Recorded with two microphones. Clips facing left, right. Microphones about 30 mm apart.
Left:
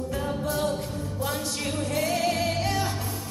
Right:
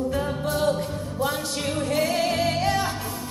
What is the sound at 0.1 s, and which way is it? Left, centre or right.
Music, centre.